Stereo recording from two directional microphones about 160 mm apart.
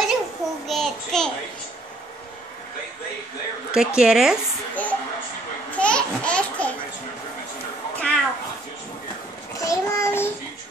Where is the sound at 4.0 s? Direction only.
5° right (ahead or behind).